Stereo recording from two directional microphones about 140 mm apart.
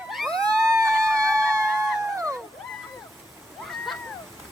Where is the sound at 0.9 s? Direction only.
5° left (ahead or behind).